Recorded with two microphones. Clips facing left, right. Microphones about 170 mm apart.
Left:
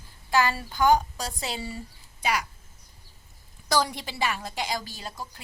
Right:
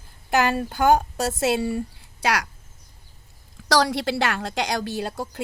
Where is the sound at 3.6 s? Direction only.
90° right; by 5.4 s 70° right (ahead or behind).